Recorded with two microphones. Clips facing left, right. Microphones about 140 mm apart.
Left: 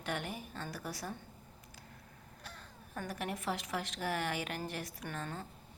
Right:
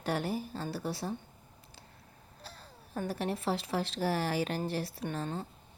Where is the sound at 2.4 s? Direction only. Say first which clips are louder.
Right 2 dB; 30° right (ahead or behind).